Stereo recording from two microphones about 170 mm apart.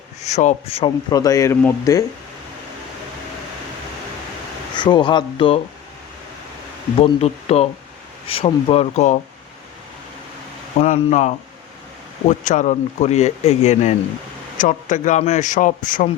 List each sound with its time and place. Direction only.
0.2 s speech: 40° left (ahead or behind)
1.1 s speech: 20° left (ahead or behind)
4.7 s speech: 25° left (ahead or behind)
7.0 s speech: 40° left (ahead or behind)
10.8 s speech: 45° left (ahead or behind)